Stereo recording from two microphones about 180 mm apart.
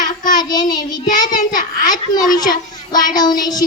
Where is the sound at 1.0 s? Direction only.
45° left (ahead or behind).